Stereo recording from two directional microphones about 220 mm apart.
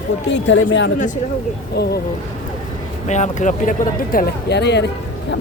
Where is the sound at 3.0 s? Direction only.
30° left (ahead or behind).